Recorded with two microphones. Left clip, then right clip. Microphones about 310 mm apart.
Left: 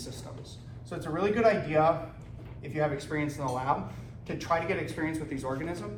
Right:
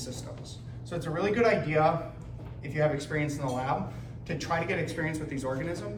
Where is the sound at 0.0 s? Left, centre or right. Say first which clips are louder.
Right 2 dB; centre.